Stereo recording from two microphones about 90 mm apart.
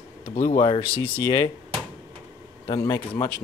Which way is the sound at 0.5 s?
65° left (ahead or behind).